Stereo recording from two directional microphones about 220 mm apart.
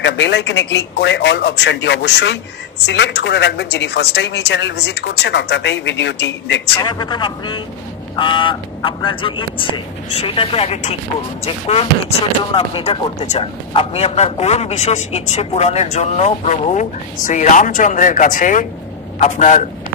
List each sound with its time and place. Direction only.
0.0 s speech: 50° left (ahead or behind)
6.8 s a man's voice: 20° left (ahead or behind)